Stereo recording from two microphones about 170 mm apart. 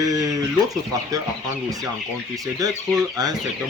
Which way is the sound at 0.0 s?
20° right (ahead or behind).